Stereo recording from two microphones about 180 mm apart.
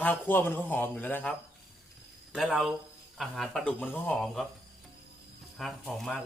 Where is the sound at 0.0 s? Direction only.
10° left (ahead or behind).